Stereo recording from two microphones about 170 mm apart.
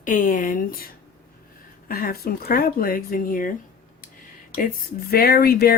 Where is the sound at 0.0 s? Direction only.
50° left (ahead or behind).